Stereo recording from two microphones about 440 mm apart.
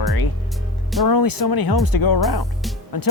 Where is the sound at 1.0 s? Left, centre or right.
Left.